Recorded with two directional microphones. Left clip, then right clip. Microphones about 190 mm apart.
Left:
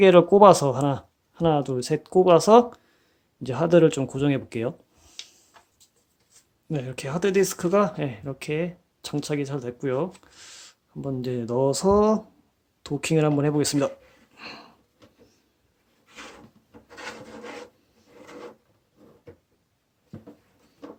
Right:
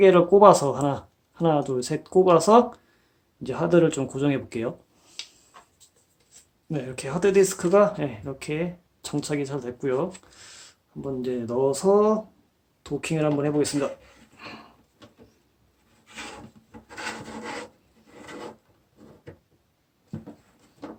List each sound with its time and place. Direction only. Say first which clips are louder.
0.0 s speech: left 1 dB; 45° left (ahead or behind)
6.7 s speech: even; 40° left (ahead or behind)
14.3 s a sound: left 1 dB; 45° left (ahead or behind)